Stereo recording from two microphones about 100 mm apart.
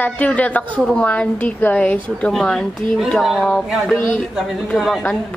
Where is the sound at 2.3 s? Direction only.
5° left (ahead or behind).